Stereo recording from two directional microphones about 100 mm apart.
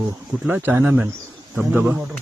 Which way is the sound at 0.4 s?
20° right (ahead or behind).